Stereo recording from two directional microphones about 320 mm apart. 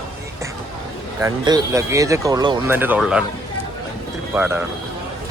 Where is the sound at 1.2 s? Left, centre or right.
Centre.